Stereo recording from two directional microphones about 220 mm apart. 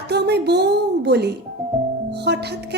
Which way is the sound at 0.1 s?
50° right (ahead or behind).